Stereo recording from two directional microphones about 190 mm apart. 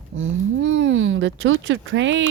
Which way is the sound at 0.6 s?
75° right (ahead or behind).